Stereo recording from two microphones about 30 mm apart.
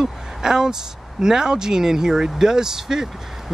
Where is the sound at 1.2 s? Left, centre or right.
Right.